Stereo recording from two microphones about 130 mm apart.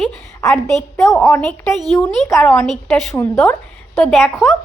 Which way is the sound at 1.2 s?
20° left (ahead or behind).